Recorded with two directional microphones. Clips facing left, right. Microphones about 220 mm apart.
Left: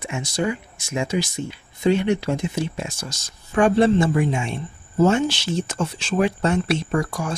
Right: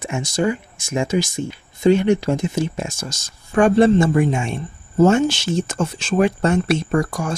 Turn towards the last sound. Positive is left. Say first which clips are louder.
# right 3 dB
turn(degrees=-45)  # may be behind; listen again after turning